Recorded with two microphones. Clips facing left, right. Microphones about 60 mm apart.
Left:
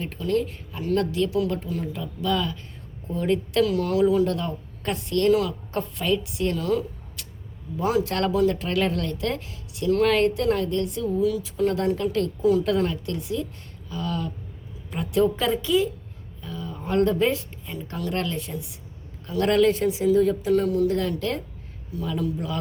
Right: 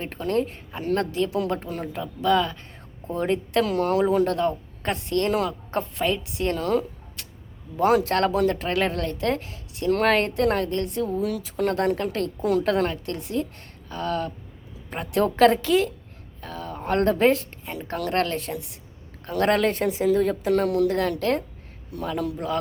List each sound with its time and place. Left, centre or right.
0.0 s speech: right
7.8 s speech: right
11.2 s a woman's voice: right
15.4 s speech: right
17.7 s speech: right
19.2 s speech: right
20.9 s speech: right